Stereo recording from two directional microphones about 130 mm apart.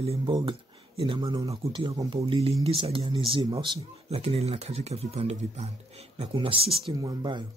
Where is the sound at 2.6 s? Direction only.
45° right (ahead or behind).